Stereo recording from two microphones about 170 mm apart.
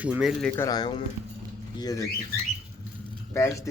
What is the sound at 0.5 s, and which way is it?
Speech, 20° left (ahead or behind).